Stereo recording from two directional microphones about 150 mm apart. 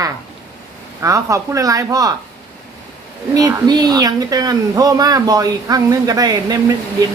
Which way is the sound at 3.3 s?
25° right (ahead or behind).